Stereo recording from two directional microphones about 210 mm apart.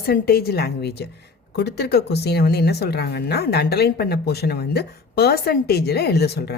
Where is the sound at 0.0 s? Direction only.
50° left (ahead or behind).